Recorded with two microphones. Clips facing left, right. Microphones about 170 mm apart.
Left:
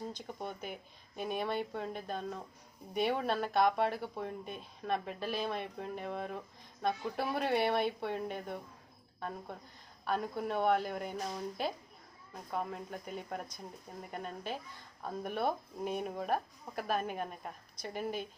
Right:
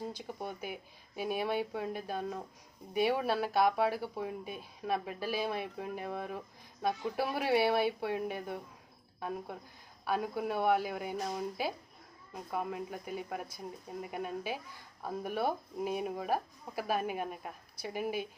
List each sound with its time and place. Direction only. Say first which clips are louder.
0.1 s speech: right 1 dB; 5° right (ahead or behind)
10.1 s speech: right 1 dB; 5° right (ahead or behind)